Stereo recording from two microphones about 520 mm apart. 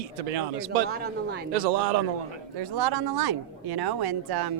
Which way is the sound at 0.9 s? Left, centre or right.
Centre.